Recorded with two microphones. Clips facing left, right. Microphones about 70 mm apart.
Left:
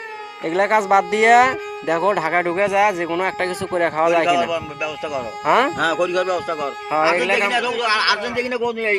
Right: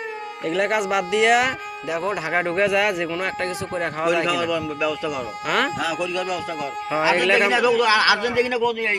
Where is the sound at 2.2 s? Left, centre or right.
Left.